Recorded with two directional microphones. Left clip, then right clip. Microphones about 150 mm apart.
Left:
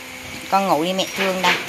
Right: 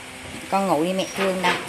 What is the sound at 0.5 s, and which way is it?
Speech, 5° right (ahead or behind).